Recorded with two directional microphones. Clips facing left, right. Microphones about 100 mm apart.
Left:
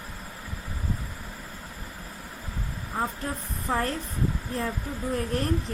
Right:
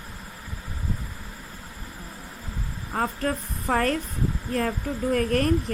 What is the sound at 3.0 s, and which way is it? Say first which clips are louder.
Speech: right 5 dB; 75° right (ahead or behind).